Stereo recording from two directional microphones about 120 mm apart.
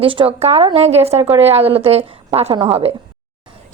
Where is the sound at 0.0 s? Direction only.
45° right (ahead or behind).